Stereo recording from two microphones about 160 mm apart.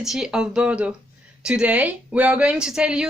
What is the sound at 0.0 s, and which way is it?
Speech, 5° right (ahead or behind).